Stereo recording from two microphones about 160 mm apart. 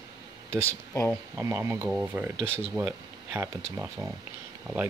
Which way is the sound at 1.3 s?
15° right (ahead or behind).